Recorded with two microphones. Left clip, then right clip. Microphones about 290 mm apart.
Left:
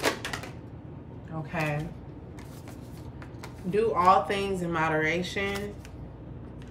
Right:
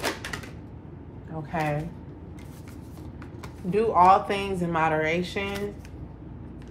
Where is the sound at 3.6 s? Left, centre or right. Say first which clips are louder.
Right 4 dB; centre.